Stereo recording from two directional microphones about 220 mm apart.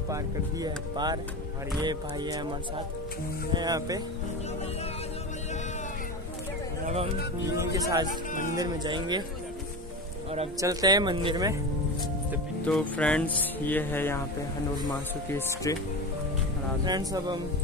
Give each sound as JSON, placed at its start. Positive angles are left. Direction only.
{"t": 0.1, "sound": "speech", "side_deg": -20}
{"t": 3.5, "sound": "speech", "side_deg": -15}
{"t": 7.4, "sound": "speech", "side_deg": -15}
{"t": 8.1, "sound": "speech", "side_deg": 35}
{"t": 8.5, "sound": "speech", "side_deg": -20}
{"t": 10.6, "sound": "speech", "side_deg": -15}
{"t": 12.6, "sound": "speech", "side_deg": 5}
{"t": 16.8, "sound": "speech", "side_deg": -20}